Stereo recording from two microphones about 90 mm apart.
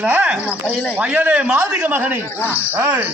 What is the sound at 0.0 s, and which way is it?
A man's voice, 15° right (ahead or behind).